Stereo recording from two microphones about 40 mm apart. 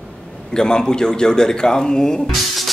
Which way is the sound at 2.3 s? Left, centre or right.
Centre.